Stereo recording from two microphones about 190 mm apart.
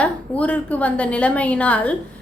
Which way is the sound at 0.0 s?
5° left (ahead or behind).